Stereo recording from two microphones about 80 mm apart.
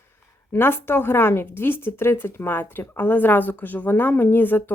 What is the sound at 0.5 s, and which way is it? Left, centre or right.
Speech, left.